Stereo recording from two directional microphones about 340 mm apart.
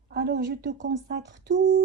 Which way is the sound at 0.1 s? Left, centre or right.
Right.